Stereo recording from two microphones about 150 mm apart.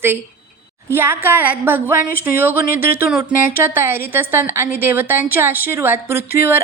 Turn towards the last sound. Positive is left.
turn(degrees=-15)  # may be behind; listen again after turning